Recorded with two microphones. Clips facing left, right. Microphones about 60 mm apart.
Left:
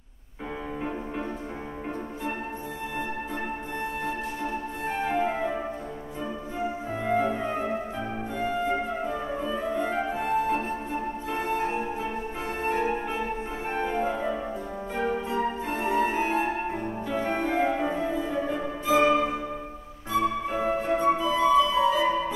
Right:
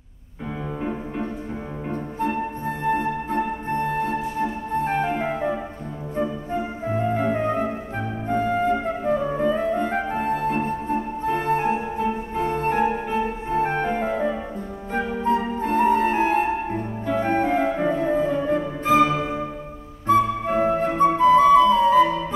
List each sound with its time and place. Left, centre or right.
2.9 s music: right
8.3 s music: right
12.4 s organ: right
13.5 s music: right
19.0 s music: centre
20.1 s flute: right